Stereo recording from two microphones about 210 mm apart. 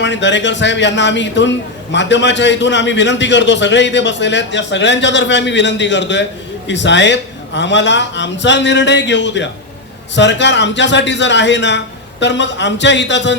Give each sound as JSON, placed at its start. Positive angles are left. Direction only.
{"t": 0.0, "sound": "a man's voice", "side_deg": 60}